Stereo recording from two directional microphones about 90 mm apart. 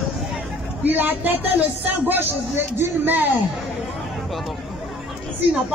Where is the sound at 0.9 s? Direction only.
20° right (ahead or behind).